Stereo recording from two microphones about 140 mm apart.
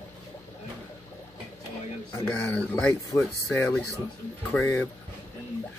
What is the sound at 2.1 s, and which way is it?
Speech, 15° left (ahead or behind).